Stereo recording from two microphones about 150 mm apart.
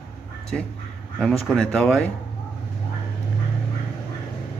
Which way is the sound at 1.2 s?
5° left (ahead or behind).